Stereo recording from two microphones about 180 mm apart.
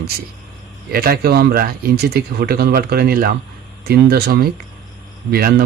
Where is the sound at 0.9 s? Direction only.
55° right (ahead or behind).